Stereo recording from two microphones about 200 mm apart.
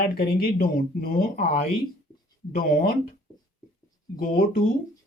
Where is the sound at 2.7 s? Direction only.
45° left (ahead or behind).